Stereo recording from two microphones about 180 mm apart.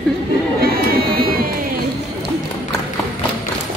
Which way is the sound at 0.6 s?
55° right (ahead or behind).